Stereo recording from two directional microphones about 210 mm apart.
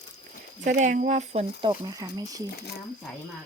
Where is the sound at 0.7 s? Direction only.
35° right (ahead or behind).